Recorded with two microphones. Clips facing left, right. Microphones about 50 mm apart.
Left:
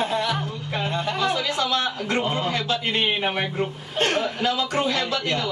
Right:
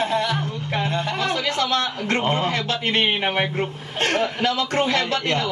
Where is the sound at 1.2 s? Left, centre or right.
Right.